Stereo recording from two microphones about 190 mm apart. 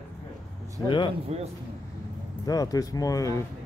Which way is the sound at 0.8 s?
25° left (ahead or behind).